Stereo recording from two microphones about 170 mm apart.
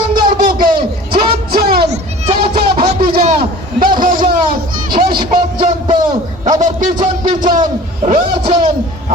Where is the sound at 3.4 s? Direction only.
55° right (ahead or behind).